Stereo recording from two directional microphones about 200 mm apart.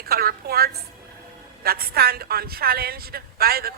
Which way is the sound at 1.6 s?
50° right (ahead or behind).